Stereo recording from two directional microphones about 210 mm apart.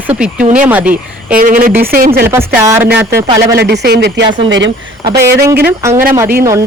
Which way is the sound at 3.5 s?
55° right (ahead or behind).